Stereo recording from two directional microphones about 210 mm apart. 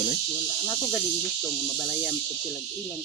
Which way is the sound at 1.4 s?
Centre (ahead or behind).